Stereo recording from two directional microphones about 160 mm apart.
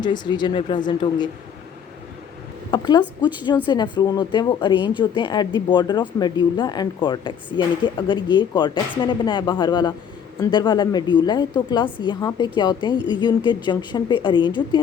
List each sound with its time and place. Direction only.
0.0 s speech: 25° left (ahead or behind)
2.7 s speech: 25° left (ahead or behind)